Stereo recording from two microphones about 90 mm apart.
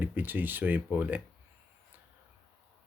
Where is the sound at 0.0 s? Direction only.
20° right (ahead or behind).